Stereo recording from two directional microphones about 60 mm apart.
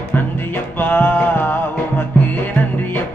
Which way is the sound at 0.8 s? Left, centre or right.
Left.